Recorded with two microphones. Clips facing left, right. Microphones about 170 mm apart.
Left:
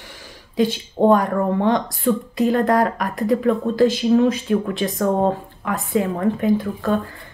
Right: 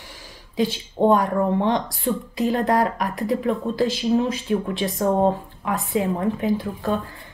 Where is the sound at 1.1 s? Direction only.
50° left (ahead or behind).